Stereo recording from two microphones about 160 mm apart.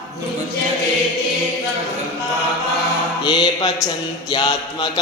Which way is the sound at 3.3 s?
30° left (ahead or behind).